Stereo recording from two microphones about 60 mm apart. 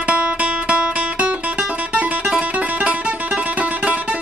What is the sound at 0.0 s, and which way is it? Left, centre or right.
Music, right.